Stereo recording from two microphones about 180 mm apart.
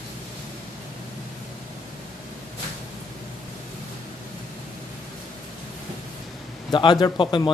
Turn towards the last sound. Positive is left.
turn(degrees=25)  # may be behind; listen again after turning